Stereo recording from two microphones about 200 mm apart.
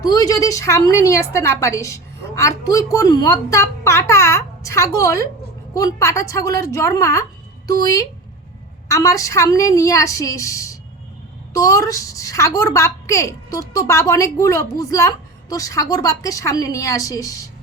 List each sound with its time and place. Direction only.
0.0 s a woman's voice: 20° left (ahead or behind)